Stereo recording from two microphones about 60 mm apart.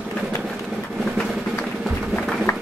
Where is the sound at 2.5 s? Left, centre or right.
Left.